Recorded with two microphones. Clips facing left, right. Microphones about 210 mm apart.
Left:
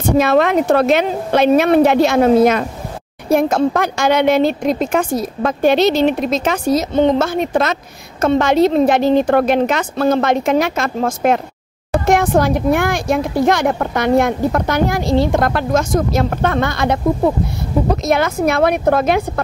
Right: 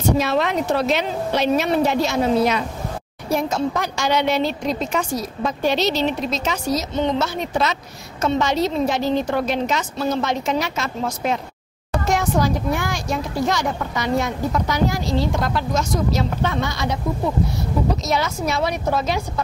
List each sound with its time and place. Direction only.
0.2 s speech: 55° left (ahead or behind)